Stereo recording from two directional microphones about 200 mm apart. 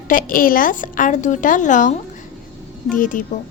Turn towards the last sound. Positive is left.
turn(degrees=40)  # may be behind; listen again after turning